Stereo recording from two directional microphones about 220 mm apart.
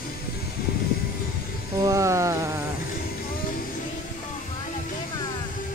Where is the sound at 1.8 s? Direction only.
15° right (ahead or behind).